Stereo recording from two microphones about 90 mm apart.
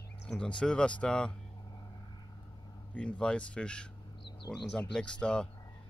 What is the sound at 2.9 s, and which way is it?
A man's voice, 10° left (ahead or behind).